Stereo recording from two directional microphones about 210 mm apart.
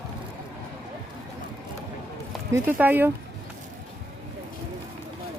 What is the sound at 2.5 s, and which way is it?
Speech, 10° right (ahead or behind).